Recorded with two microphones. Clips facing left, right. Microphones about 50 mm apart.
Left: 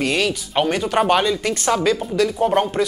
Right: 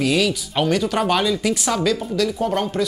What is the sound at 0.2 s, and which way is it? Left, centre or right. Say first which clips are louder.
Speech: left 1 dB; left.